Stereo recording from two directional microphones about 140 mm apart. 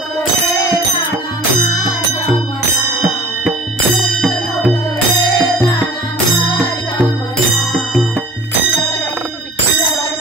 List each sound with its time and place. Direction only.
5.1 s music: 30° left (ahead or behind)